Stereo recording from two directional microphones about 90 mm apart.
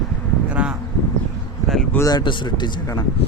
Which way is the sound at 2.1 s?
55° left (ahead or behind).